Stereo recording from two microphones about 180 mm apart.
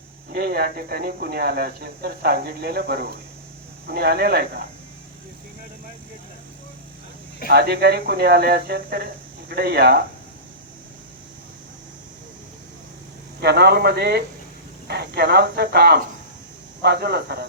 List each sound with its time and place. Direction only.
0.3 s speech: 60° right (ahead or behind)
7.5 s speech: 60° right (ahead or behind)
13.4 s speech: 65° right (ahead or behind)